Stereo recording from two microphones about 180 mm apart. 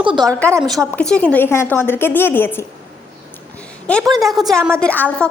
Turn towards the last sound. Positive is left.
turn(degrees=10)  # may be behind; listen again after turning